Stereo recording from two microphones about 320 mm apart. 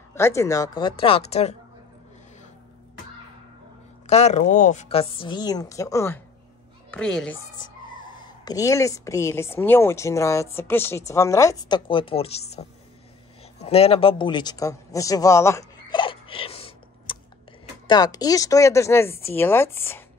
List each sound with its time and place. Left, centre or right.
0.1 s speech: centre
4.1 s speech: left; by 7.3 s centre
7.5 s speech: centre
13.6 s a sound: centre
17.8 s speech: centre